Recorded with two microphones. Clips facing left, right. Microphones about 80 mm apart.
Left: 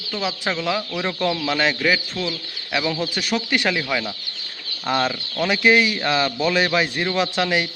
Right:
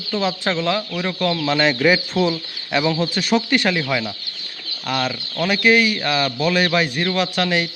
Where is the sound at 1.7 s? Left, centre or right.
Centre.